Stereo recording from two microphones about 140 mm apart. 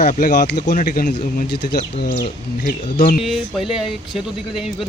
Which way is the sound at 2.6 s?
90° left.